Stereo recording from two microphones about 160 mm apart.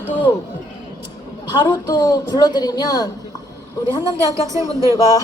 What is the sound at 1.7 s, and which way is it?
A woman's voice, 25° left (ahead or behind).